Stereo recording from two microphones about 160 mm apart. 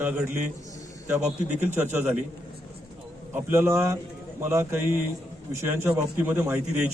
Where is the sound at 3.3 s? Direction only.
15° right (ahead or behind).